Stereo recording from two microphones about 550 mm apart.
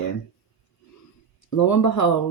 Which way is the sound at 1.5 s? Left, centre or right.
Left.